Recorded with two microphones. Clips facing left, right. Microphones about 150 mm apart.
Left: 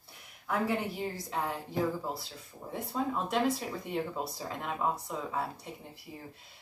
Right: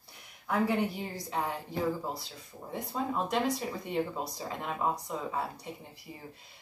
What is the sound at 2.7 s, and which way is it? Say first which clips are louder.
Speech: left 1 dB; centre (ahead or behind).